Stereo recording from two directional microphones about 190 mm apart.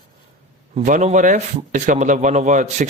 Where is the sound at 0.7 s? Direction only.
40° right (ahead or behind).